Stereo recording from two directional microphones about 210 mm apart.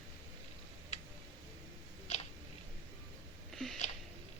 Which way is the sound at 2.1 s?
30° left (ahead or behind).